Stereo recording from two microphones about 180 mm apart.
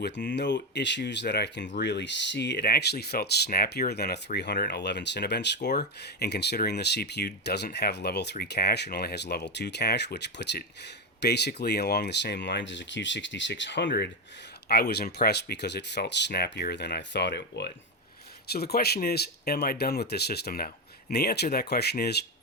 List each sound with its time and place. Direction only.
0.0 s speech: 75° left (ahead or behind)